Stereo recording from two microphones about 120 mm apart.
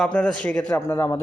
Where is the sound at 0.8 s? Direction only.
25° left (ahead or behind).